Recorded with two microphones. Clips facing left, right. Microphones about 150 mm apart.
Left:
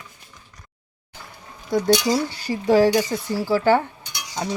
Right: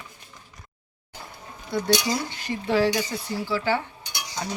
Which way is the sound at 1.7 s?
40° left (ahead or behind).